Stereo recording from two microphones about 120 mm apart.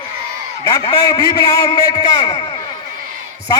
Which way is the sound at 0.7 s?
30° left (ahead or behind).